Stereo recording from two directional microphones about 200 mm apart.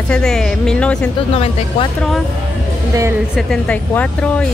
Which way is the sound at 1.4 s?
30° left (ahead or behind).